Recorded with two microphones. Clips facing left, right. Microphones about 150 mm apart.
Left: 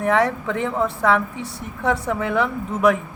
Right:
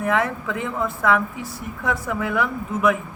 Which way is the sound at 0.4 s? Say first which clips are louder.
Left 3 dB; 30° left (ahead or behind).